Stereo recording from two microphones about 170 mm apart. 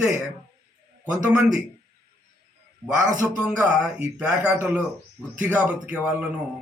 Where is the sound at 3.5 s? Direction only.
5° right (ahead or behind).